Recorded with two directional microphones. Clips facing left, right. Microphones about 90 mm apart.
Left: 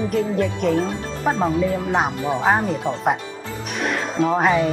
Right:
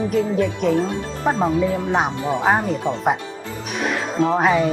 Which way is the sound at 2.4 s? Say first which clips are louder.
Even; centre (ahead or behind).